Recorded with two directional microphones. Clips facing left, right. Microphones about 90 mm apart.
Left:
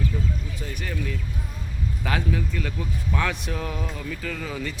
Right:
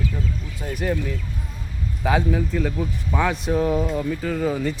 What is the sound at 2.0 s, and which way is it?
Speech, 10° right (ahead or behind).